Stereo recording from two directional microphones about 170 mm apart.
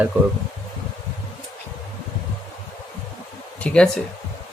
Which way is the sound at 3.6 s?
10° left (ahead or behind).